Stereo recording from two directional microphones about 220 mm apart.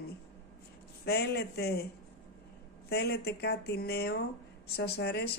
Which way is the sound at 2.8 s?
50° left (ahead or behind).